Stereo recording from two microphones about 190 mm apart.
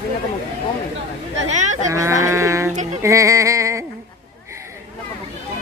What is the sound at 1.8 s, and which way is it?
Speech, 15° right (ahead or behind).